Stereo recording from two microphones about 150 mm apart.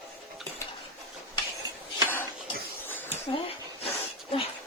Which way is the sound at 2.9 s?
15° left (ahead or behind).